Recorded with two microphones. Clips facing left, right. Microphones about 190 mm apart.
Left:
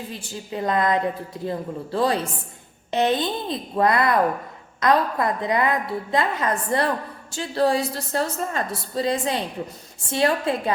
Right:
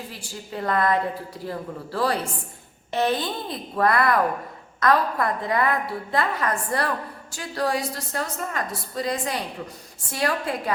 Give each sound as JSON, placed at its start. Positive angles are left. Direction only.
{"t": 0.1, "sound": "a woman's voice", "side_deg": 20}